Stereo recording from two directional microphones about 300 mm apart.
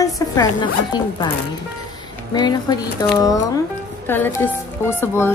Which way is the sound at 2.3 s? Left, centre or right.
Centre.